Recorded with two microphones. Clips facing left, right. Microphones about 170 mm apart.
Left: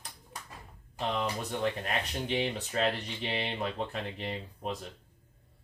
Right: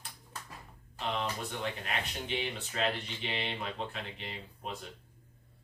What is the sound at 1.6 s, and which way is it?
Speech, 40° left (ahead or behind).